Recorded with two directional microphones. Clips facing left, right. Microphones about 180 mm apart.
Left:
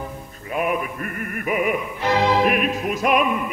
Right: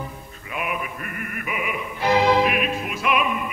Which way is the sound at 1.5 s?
45° left (ahead or behind).